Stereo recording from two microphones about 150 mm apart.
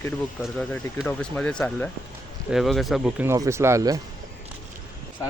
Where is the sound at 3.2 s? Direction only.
20° right (ahead or behind).